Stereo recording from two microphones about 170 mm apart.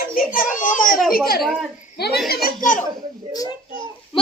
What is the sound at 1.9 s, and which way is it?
Chuckle, 70° left (ahead or behind).